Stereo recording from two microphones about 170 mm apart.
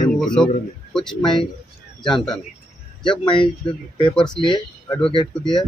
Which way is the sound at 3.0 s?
30° left (ahead or behind).